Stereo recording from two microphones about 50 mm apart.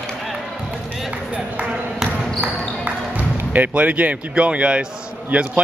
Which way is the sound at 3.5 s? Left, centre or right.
Right.